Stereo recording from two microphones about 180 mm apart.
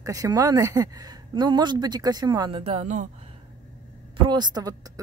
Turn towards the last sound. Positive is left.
turn(degrees=-20)  # may be behind; listen again after turning